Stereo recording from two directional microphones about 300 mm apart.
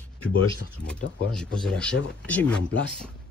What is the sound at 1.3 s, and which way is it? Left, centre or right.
Speech, centre.